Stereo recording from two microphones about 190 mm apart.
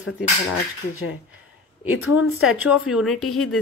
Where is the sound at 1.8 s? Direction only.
90° left.